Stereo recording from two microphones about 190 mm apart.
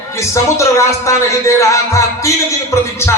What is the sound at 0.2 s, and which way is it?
Speech, 15° left (ahead or behind).